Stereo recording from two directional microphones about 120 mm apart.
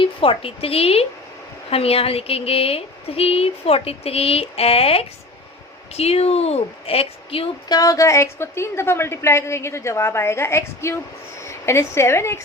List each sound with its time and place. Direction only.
0.0 s a woman's voice: 50° left (ahead or behind)
7.7 s a woman's voice: 30° left (ahead or behind)